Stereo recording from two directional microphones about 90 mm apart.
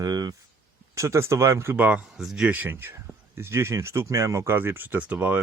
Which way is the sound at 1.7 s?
15° right (ahead or behind).